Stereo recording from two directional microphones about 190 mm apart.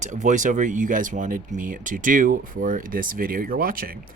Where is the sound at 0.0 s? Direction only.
40° right (ahead or behind).